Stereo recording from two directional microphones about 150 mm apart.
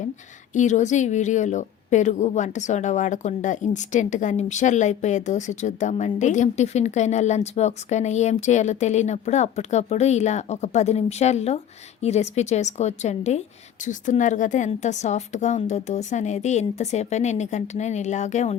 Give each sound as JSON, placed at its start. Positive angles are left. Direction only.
{"t": 0.5, "sound": "a woman's voice", "side_deg": 55}